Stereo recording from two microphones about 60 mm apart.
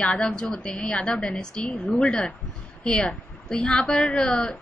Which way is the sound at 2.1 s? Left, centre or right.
Centre.